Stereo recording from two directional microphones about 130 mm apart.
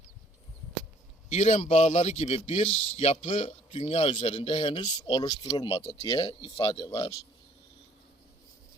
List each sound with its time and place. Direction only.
1.3 s speech: 60° left (ahead or behind); by 7.1 s 25° left (ahead or behind)